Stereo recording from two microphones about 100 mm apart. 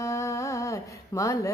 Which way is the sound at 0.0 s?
30° left (ahead or behind).